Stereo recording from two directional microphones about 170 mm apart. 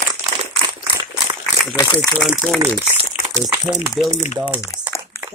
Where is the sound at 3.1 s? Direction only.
35° left (ahead or behind).